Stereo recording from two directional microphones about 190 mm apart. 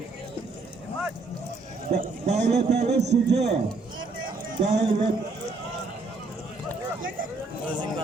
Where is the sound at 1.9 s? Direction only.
35° right (ahead or behind).